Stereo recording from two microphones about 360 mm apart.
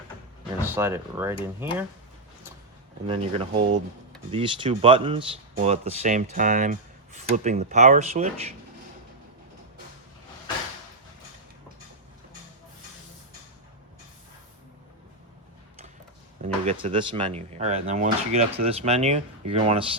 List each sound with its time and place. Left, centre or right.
0.8 s speech: centre
3.1 s speech: centre
16.4 s speech: centre